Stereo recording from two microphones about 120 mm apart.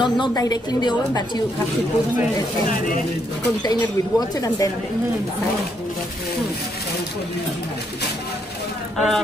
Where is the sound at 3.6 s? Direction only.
35° left (ahead or behind).